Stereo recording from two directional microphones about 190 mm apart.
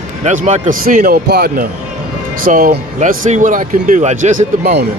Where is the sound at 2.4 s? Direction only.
45° right (ahead or behind).